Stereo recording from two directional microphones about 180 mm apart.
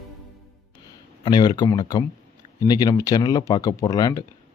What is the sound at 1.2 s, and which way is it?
Speech, 25° left (ahead or behind).